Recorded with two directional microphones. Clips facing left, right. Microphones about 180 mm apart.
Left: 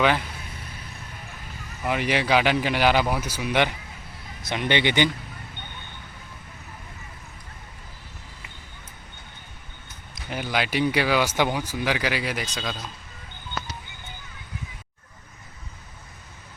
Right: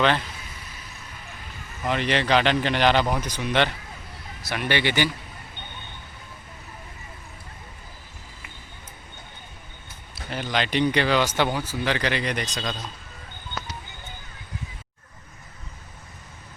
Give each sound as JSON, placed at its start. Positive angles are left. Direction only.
{"t": 0.0, "sound": "speech", "side_deg": 10}
{"t": 1.8, "sound": "a man's voice", "side_deg": 10}
{"t": 10.2, "sound": "speech", "side_deg": 15}